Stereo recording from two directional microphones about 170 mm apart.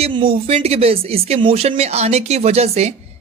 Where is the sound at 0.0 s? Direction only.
30° right (ahead or behind).